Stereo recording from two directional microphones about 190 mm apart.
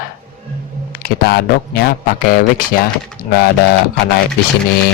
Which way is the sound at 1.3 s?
55° left (ahead or behind).